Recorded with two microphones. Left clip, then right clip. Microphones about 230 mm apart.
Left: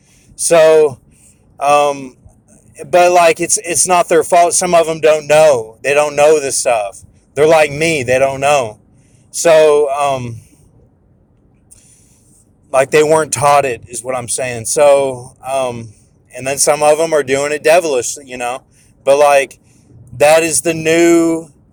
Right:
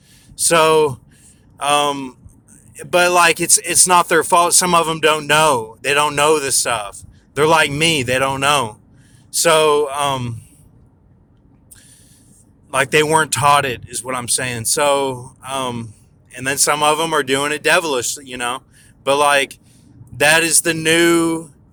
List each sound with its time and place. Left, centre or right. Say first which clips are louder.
0.4 s speech: left 5 dB; centre
12.7 s speech: left 4 dB; centre